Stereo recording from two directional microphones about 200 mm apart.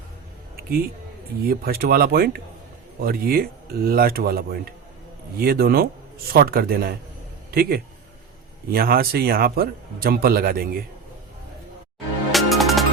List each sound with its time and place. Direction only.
1.5 s a man's voice: 50° right (ahead or behind)
12.3 s music: centre (ahead or behind)